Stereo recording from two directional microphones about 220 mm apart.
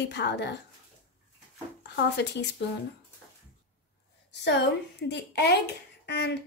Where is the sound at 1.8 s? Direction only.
50° left (ahead or behind).